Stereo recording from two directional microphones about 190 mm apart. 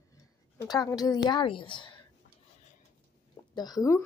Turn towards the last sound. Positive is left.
turn(degrees=15)  # may be behind; listen again after turning